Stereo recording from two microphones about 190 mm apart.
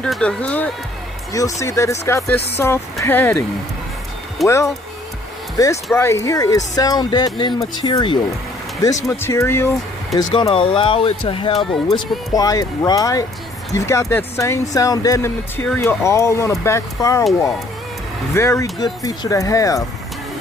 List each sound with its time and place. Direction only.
0.0 s speech: 5° left (ahead or behind)
1.3 s speech: 15° left (ahead or behind)
4.4 s speech: centre (ahead or behind)
5.6 s speech: 20° left (ahead or behind)
10.1 s speech: 25° left (ahead or behind)
18.3 s speech: 15° left (ahead or behind)